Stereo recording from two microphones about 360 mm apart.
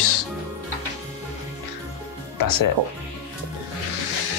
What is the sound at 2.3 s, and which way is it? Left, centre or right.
Speech, left.